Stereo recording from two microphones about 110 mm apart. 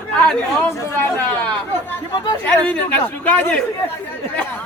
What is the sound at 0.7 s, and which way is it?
Speech, 25° left (ahead or behind).